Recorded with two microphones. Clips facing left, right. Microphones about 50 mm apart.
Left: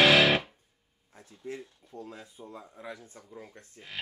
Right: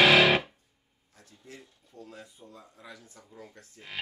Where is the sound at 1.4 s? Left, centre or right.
Left.